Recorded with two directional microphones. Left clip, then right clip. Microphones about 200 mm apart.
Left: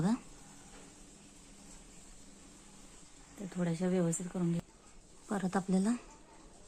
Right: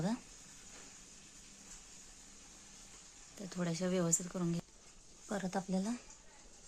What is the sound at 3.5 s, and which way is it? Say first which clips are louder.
Speech: left 2 dB; 15° right (ahead or behind).